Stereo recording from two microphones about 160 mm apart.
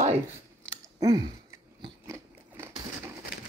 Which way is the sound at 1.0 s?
25° right (ahead or behind).